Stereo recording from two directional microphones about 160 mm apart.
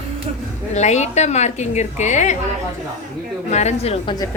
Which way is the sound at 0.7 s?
45° left (ahead or behind).